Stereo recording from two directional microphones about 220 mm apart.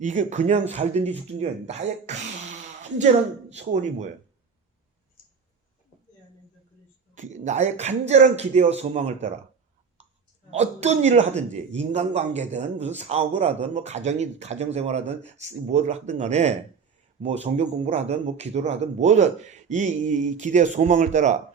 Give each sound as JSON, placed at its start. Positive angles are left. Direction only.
{"t": 0.0, "sound": "a man's voice", "side_deg": -35}
{"t": 7.2, "sound": "a man's voice", "side_deg": -35}
{"t": 10.5, "sound": "a man's voice", "side_deg": -30}